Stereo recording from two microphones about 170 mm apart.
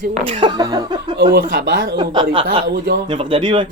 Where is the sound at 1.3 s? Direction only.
60° right (ahead or behind).